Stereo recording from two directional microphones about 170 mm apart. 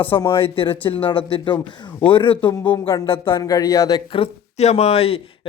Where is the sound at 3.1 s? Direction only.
30° left (ahead or behind).